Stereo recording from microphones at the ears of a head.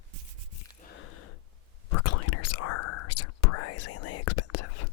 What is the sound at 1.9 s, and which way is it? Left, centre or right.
Whispering, left.